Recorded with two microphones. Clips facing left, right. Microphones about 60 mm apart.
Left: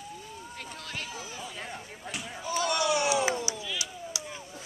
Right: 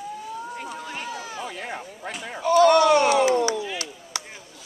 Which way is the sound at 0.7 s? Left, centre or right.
Centre.